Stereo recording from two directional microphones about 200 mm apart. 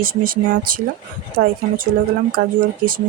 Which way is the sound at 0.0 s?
45° right (ahead or behind).